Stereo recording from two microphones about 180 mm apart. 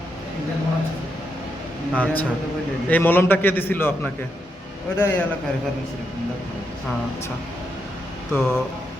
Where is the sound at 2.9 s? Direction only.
10° left (ahead or behind).